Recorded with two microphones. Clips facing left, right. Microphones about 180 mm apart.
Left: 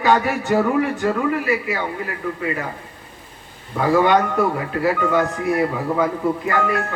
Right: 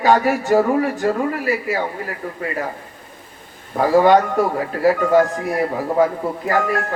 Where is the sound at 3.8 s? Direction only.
35° right (ahead or behind).